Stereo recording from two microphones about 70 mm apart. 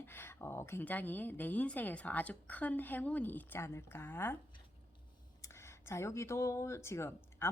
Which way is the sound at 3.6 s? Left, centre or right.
Left.